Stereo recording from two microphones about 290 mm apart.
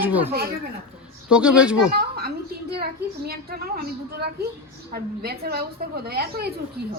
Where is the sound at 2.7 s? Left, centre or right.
Right.